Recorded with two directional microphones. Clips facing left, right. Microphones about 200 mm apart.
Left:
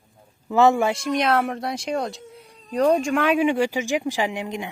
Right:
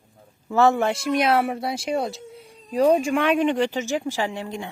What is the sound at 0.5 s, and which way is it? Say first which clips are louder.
Speech: left 1 dB; 15° left (ahead or behind).